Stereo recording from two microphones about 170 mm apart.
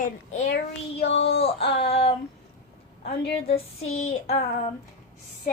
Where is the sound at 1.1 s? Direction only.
90° left.